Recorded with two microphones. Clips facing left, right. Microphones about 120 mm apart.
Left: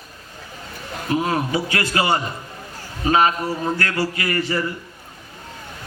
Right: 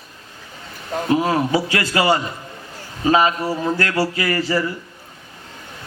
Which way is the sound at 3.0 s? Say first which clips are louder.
Right 1 dB; 30° right (ahead or behind).